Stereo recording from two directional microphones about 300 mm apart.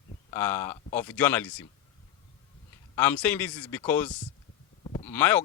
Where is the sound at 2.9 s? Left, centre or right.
Centre.